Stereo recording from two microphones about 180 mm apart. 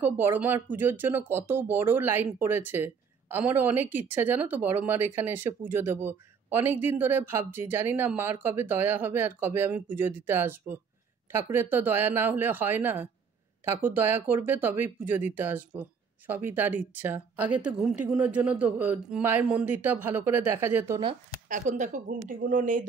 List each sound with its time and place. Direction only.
0.0 s speech: 10° right (ahead or behind)
21.5 s speech: 45° right (ahead or behind)